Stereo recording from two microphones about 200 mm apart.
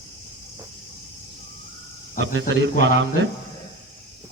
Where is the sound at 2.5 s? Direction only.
65° right (ahead or behind).